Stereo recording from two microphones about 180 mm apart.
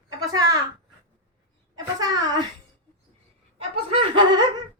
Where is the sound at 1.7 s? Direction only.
20° right (ahead or behind).